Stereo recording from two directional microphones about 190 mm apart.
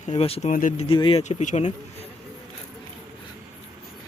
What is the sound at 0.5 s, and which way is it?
Speech, 45° left (ahead or behind).